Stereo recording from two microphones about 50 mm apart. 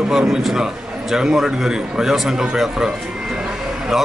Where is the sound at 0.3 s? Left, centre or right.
Centre.